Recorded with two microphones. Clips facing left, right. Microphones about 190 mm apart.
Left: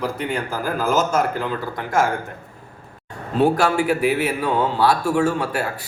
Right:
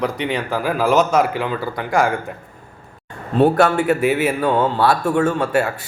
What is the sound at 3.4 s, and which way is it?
A man's voice, 5° left (ahead or behind).